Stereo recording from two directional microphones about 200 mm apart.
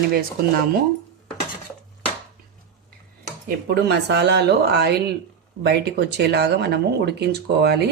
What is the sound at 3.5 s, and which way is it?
Speech, 55° right (ahead or behind).